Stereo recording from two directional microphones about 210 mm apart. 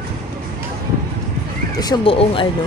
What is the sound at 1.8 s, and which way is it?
Speech, 20° left (ahead or behind).